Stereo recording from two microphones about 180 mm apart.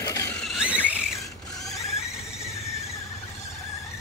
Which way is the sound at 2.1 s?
5° right (ahead or behind).